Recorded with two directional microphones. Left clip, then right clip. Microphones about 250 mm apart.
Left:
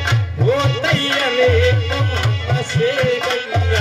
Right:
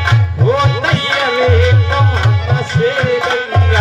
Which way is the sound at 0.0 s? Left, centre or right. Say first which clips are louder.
Right 3 dB; left.